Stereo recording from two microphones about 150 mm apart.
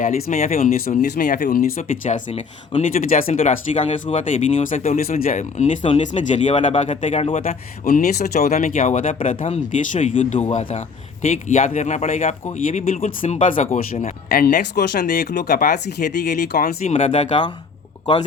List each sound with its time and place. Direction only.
0.0 s speech: 55° left (ahead or behind)
3.7 s speech: 50° left (ahead or behind)
5.2 s speech: 55° left (ahead or behind)
7.4 s speech: 70° left (ahead or behind); by 8.5 s 90° left
8.5 s speech: 60° left (ahead or behind)
13.2 s speech: 50° left (ahead or behind)
14.0 s speech: 85° left
16.8 s speech: 50° left (ahead or behind)
18.0 s speech: 30° left (ahead or behind)